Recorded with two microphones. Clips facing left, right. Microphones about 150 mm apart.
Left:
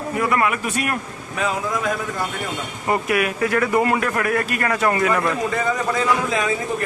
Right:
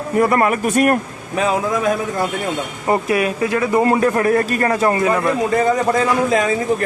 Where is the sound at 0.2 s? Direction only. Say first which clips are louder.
Right 6 dB; 40° right (ahead or behind).